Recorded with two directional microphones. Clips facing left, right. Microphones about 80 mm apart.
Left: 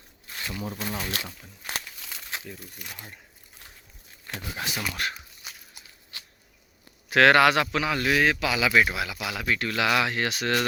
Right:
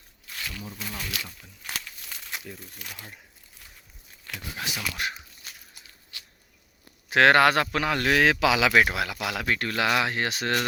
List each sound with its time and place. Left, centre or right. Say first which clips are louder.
0.3 s a sound: left 2 dB; left
0.6 s speech: left 6 dB; left
0.9 s speech: left 4 dB; left
2.7 s speech: even; centre
4.6 s speech: left 1 dB; centre
5.0 s speech: right 1 dB; centre
5.4 s walk: left 3 dB; centre
6.1 s a sound: left 2 dB; left
7.1 s a man's voice: even; right
9.5 s speech: left 1 dB; right